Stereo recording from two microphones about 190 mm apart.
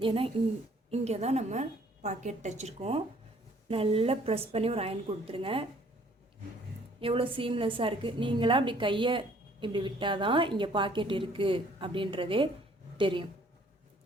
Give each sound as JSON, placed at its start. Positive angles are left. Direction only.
{"t": 0.0, "sound": "a woman's voice", "side_deg": -30}
{"t": 7.0, "sound": "a woman's voice", "side_deg": -30}